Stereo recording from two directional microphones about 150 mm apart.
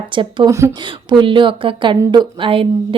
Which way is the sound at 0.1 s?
35° right (ahead or behind).